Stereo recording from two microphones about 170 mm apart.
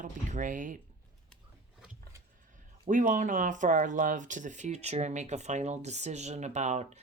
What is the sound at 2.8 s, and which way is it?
Speech, 50° right (ahead or behind).